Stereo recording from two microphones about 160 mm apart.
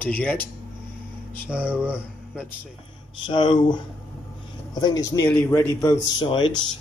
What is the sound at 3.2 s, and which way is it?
A man's voice, 30° left (ahead or behind).